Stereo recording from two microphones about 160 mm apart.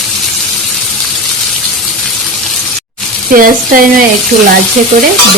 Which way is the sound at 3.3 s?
60° right (ahead or behind).